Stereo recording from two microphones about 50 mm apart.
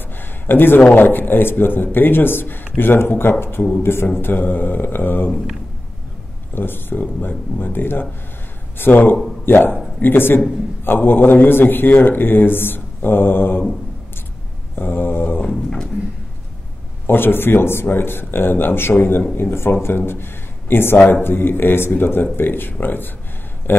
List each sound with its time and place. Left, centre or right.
0.2 s a sound: left
0.9 s a man's voice: left
4.2 s mantra: left
6.5 s a man's voice: left
8.7 s mantra: left
9.5 s a man's voice: left
14.8 s a man's voice: left
15.4 s speech: centre
17.0 s a man's voice: left